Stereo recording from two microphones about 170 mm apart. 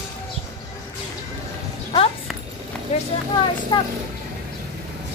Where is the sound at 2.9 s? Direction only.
40° left (ahead or behind).